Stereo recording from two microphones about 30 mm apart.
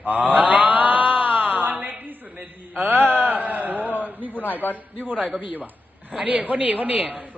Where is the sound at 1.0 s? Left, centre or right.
Right.